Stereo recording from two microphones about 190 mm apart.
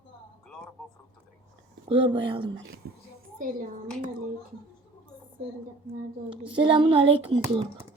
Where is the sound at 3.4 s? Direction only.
45° right (ahead or behind).